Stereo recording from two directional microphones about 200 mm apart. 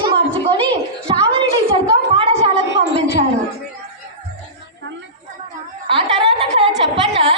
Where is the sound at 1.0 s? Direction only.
25° right (ahead or behind).